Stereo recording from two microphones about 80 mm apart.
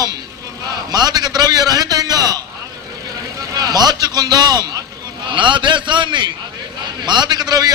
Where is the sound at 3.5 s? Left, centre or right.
Right.